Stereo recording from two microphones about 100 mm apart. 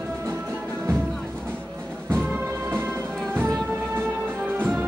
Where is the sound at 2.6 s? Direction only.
25° right (ahead or behind).